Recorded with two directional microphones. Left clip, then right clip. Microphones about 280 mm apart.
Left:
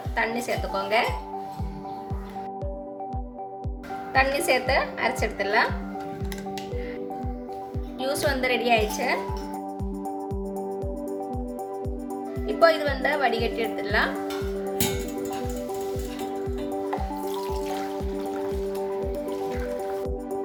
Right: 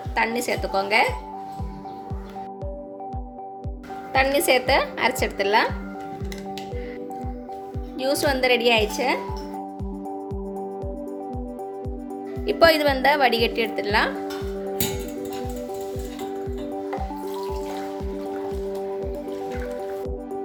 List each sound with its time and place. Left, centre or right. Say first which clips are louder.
0.2 s speech: right 3 dB; right
4.1 s speech: right 3 dB; right
8.0 s speech: right 4 dB; right
12.5 s speech: right 3 dB; right